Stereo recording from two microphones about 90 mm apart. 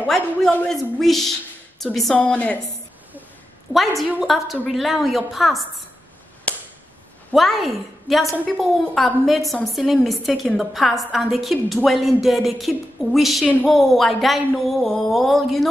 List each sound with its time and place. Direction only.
0.0 s a man's voice: 5° left (ahead or behind)
2.1 s a woman's voice: 15° left (ahead or behind)
3.7 s a woman's voice: centre (ahead or behind)
6.5 s a sound: 15° left (ahead or behind)
7.3 s a woman's voice: centre (ahead or behind)